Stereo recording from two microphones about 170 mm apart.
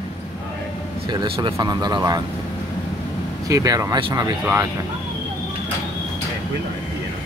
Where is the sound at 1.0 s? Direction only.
30° right (ahead or behind).